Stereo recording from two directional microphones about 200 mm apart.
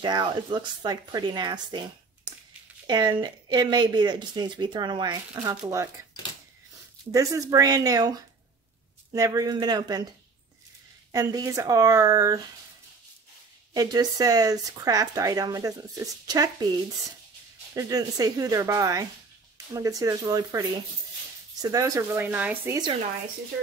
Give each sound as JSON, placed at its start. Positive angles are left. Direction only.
{"t": 0.0, "sound": "speech", "side_deg": -25}
{"t": 2.9, "sound": "speech", "side_deg": -20}
{"t": 7.1, "sound": "speech", "side_deg": -15}
{"t": 11.1, "sound": "speech", "side_deg": -15}
{"t": 13.7, "sound": "speech", "side_deg": -20}
{"t": 17.7, "sound": "speech", "side_deg": -20}